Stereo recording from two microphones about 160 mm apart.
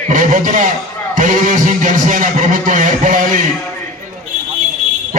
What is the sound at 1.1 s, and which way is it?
A man's voice, 50° right (ahead or behind).